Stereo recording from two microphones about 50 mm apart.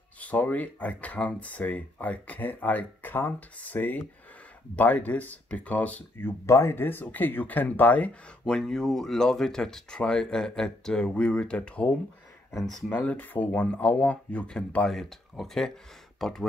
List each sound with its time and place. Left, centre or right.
0.2 s speech: left
6.4 s speech: left
6.7 s speech: left
8.1 s speech: centre
8.6 s speech: centre; by 11.9 s left
13.2 s speech: left
13.8 s speech: left
14.9 s speech: centre